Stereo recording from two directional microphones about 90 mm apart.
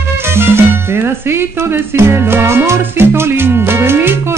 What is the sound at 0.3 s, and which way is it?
Music, 25° right (ahead or behind).